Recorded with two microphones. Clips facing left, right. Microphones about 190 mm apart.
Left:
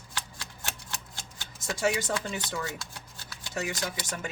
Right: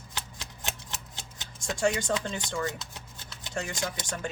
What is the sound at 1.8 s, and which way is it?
Speech, 5° left (ahead or behind).